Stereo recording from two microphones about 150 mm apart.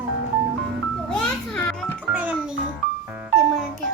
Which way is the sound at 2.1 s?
10° right (ahead or behind).